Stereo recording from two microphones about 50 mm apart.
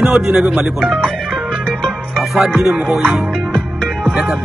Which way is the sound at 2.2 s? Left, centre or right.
Centre.